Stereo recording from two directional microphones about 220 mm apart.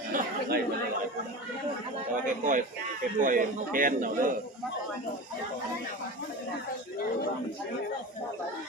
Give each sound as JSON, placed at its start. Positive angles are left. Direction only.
{"t": 0.1, "sound": "chatter", "side_deg": -45}
{"t": 2.2, "sound": "a man's voice", "side_deg": -35}